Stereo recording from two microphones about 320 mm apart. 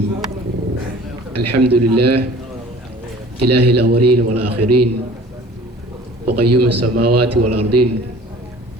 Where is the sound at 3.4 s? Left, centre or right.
Right.